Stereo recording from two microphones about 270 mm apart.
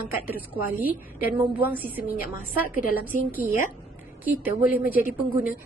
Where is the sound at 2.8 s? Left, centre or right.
Left.